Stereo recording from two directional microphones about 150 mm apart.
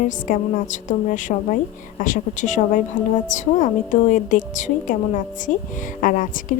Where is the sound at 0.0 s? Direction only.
60° left (ahead or behind).